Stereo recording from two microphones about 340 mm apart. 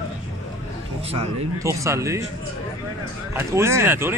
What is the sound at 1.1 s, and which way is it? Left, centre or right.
Speech, centre.